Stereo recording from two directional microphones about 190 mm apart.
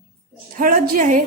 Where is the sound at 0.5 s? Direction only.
45° right (ahead or behind).